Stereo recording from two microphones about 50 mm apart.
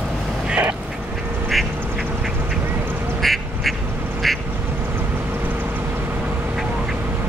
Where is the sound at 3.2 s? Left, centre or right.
Centre.